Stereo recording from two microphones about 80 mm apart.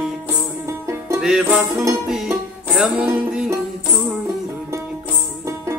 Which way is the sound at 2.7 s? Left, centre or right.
Centre.